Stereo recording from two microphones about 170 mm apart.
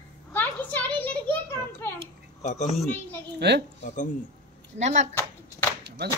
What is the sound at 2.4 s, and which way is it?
Speech, 45° left (ahead or behind).